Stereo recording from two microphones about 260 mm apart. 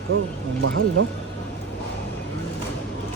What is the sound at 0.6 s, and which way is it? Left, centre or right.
Speech, right.